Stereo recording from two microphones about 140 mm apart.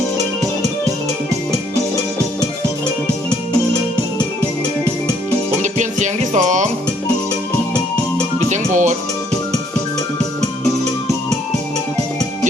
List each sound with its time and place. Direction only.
5.6 s music: 60° right (ahead or behind)
8.4 s music: 60° right (ahead or behind)